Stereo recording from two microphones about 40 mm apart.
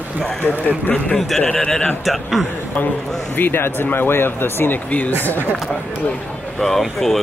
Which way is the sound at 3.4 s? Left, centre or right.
Left.